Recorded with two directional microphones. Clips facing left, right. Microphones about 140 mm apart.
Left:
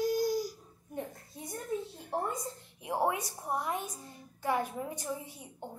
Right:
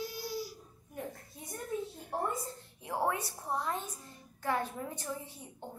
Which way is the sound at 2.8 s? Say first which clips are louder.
Left 2 dB; 15° left (ahead or behind).